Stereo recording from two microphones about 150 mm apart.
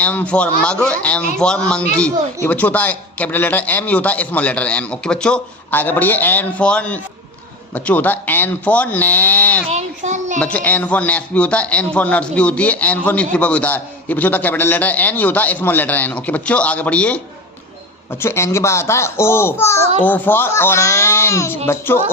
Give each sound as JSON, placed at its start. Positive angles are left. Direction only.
{"t": 0.0, "sound": "a man's voice", "side_deg": 10}
{"t": 9.6, "sound": "a child's voice", "side_deg": -50}
{"t": 10.4, "sound": "a man's voice", "side_deg": 10}
{"t": 18.2, "sound": "a man's voice", "side_deg": 15}